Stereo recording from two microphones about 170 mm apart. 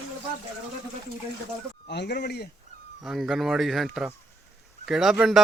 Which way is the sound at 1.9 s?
80° left.